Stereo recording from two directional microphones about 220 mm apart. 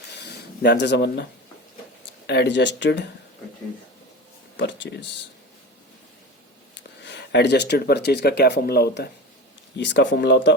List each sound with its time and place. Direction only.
0.2 s speech: 50° left (ahead or behind)
4.5 s speech: 55° left (ahead or behind)
7.0 s speech: 50° left (ahead or behind)